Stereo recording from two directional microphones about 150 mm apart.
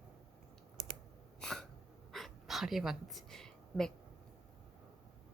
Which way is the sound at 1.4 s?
5° left (ahead or behind).